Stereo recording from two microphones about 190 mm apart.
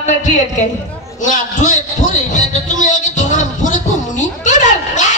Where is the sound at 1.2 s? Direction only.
40° left (ahead or behind).